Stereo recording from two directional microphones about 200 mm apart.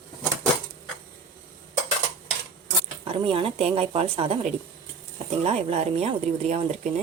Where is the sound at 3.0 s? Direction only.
25° right (ahead or behind).